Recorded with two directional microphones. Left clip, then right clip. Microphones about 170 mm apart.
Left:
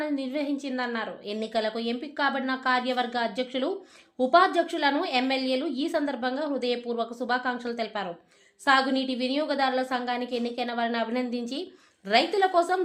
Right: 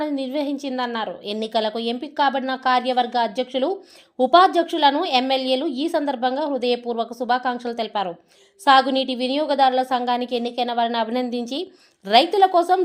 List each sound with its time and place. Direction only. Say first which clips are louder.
0.0 s a woman's voice: right 5 dB; 30° right (ahead or behind)